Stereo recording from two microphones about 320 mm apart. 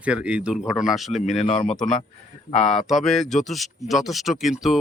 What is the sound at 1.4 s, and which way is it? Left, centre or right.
Speech, left.